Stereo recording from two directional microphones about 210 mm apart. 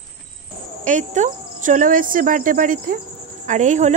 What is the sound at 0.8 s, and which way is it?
Speech, 35° right (ahead or behind).